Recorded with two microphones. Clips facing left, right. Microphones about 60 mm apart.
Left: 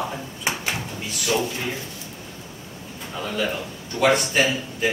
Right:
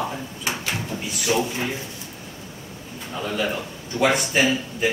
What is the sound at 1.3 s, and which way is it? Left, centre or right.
Speech, right.